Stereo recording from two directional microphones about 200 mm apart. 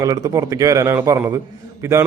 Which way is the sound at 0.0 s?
20° right (ahead or behind).